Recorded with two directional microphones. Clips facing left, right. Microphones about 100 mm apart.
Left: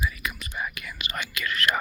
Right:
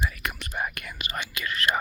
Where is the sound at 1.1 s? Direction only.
30° right (ahead or behind).